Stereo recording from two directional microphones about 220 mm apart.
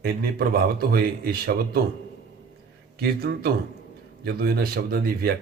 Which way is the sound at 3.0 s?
45° right (ahead or behind).